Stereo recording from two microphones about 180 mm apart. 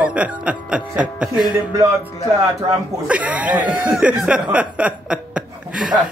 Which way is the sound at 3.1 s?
5° right (ahead or behind).